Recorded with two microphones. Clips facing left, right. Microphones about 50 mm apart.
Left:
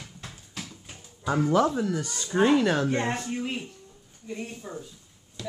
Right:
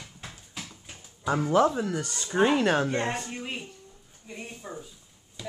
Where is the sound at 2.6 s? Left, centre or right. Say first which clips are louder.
Even; right.